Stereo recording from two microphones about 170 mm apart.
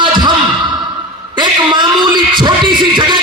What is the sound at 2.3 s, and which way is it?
Music, 25° right (ahead or behind).